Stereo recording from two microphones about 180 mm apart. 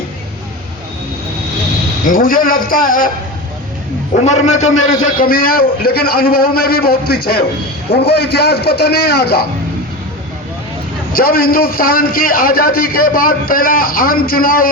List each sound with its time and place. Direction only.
2.0 s a man's voice: 50° left (ahead or behind)
4.2 s a man's voice: 40° left (ahead or behind); by 9.5 s 65° left (ahead or behind)
11.1 s a man's voice: 55° left (ahead or behind)